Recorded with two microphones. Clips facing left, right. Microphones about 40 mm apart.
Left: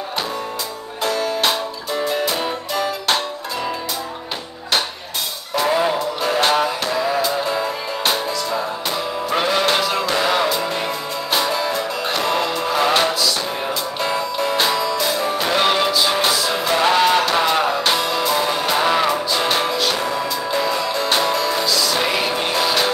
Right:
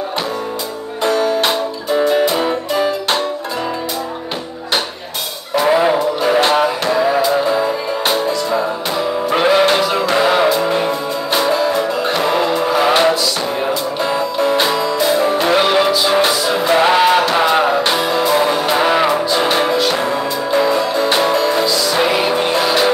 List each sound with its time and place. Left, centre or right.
1.0 s music: right
5.5 s music: centre